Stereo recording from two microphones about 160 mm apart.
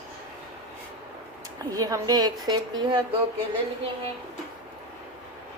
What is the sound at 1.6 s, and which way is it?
A woman's voice, 20° right (ahead or behind).